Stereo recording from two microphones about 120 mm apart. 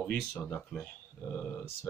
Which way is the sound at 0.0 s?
15° left (ahead or behind).